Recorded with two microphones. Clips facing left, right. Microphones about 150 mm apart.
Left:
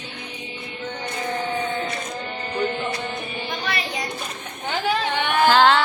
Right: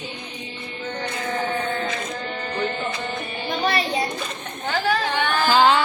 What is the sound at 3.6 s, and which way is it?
Child singing, 35° right (ahead or behind).